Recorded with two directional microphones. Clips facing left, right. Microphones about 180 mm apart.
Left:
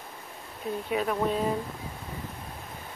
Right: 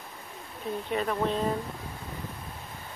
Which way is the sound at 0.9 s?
5° left (ahead or behind).